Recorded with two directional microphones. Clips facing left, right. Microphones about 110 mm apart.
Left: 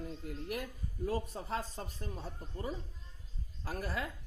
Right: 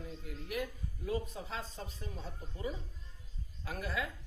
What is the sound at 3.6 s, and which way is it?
Speech, 40° left (ahead or behind).